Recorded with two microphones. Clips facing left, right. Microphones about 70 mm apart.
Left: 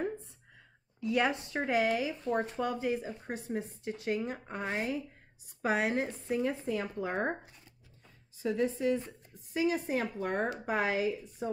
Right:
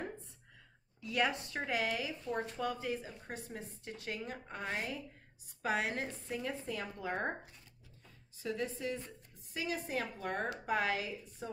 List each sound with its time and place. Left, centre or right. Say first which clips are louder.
1.0 s speech: left 4 dB; left
8.4 s speech: left 7 dB; left